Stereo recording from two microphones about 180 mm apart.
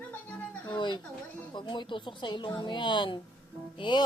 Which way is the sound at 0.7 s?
25° left (ahead or behind).